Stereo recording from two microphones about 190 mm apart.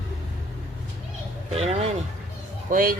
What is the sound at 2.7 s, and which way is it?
Speech, 45° right (ahead or behind).